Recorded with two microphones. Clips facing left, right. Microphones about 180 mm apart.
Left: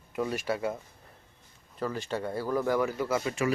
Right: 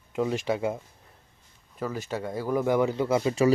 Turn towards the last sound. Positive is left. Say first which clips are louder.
# right 6 dB
turn(degrees=-25)  # may be behind; listen again after turning